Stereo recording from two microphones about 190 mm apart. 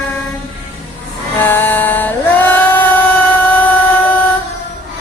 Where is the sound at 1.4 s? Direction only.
10° left (ahead or behind).